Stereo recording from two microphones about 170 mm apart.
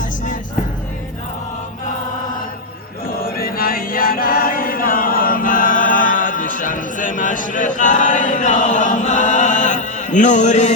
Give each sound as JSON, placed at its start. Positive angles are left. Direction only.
{"t": 3.1, "sound": "chant", "side_deg": 60}